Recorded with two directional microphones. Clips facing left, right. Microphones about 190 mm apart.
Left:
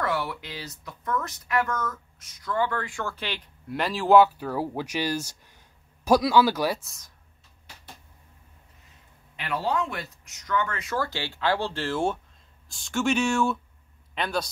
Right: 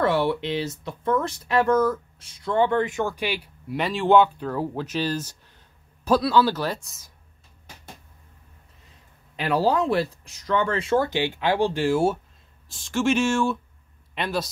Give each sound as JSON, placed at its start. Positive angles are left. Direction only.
{"t": 0.0, "sound": "speech", "side_deg": -30}
{"t": 9.4, "sound": "speech", "side_deg": -35}